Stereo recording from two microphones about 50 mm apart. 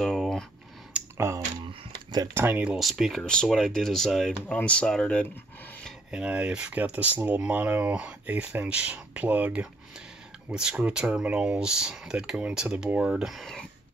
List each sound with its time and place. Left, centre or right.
0.0 s a sound: centre
1.1 s a sound: right
2.3 s speech: right
2.8 s speech: centre
3.2 s speech: centre
4.5 s speech: left
6.2 s speech: right
10.5 s speech: centre